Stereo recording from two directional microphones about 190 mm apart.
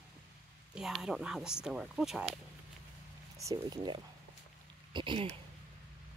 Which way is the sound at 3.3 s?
20° right (ahead or behind).